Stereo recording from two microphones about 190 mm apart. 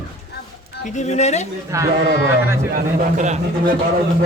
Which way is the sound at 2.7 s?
45° right (ahead or behind).